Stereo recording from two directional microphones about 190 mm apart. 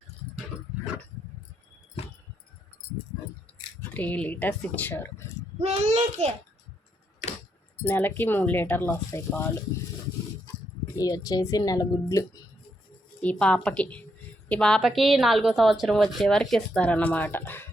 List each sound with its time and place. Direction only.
3.8 s speech: 10° left (ahead or behind)
5.5 s a child's voice: 35° right (ahead or behind)
7.2 s keys jangling: 40° left (ahead or behind)
7.9 s speech: 10° left (ahead or behind)
10.9 s a woman's voice: 20° left (ahead or behind)
13.2 s a woman's voice: 5° left (ahead or behind)